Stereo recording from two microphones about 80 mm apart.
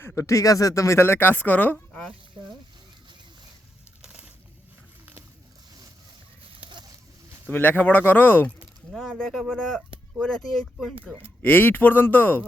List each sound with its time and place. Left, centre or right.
0.2 s speech: left; by 2.1 s centre
4.0 s bird: centre
7.5 s speech: left
9.0 s speech: centre
11.4 s speech: left